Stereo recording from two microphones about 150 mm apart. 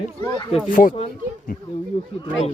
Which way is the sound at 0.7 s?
65° left (ahead or behind).